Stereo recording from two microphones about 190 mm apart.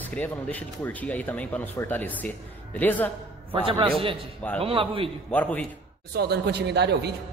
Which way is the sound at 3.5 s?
30° right (ahead or behind).